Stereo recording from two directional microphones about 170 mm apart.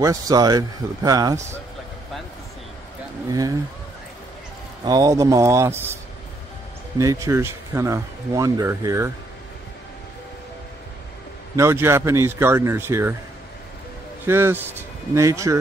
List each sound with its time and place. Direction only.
0.0 s a man's voice: 20° right (ahead or behind)
3.3 s a man's voice: 20° right (ahead or behind)
4.8 s speech: 20° right (ahead or behind)
7.0 s speech: 20° right (ahead or behind)
11.5 s speech: 15° right (ahead or behind)
14.2 s speech: 15° right (ahead or behind)